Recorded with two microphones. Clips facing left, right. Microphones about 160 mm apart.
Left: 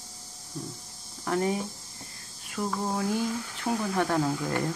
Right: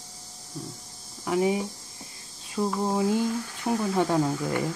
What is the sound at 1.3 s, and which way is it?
Speech, 15° right (ahead or behind).